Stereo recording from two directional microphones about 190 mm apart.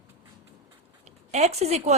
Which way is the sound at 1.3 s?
35° right (ahead or behind).